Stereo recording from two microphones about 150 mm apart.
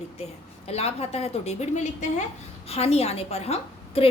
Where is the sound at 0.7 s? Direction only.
45° left (ahead or behind).